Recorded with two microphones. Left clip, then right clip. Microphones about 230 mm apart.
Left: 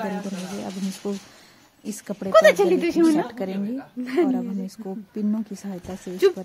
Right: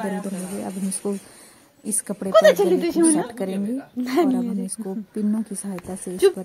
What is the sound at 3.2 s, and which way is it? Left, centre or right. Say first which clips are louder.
Speech: right 2 dB; centre.